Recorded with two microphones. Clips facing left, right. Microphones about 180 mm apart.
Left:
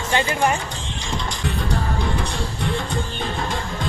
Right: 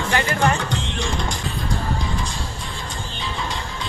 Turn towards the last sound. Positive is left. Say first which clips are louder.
# left 3 dB
turn(degrees=50)  # may be behind; listen again after turning